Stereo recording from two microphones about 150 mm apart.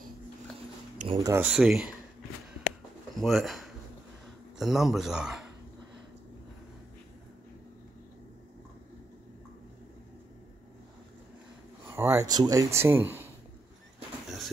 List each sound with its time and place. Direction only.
1.1 s speech: 20° right (ahead or behind)
1.4 s speech: 5° right (ahead or behind)
3.2 s speech: centre (ahead or behind)
11.9 s speech: 15° right (ahead or behind)